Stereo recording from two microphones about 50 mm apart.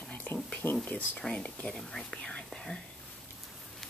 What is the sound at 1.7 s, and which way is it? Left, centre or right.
Speech, centre.